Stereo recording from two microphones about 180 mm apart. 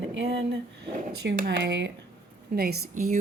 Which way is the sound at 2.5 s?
60° right (ahead or behind).